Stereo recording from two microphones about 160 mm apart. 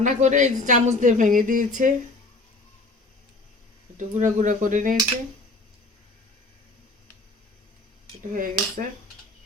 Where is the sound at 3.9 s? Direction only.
50° right (ahead or behind).